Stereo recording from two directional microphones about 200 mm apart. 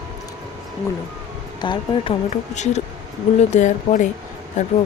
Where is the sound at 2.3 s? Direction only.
35° left (ahead or behind).